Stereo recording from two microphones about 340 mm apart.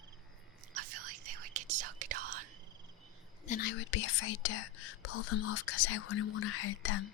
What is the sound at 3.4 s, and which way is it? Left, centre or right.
Speech, left.